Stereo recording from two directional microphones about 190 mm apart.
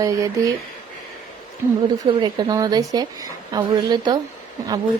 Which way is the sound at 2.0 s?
20° right (ahead or behind).